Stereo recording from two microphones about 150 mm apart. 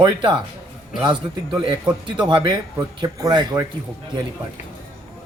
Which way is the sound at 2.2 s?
30° right (ahead or behind).